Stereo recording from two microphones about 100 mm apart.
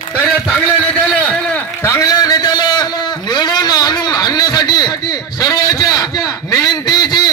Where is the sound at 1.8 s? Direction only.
30° left (ahead or behind).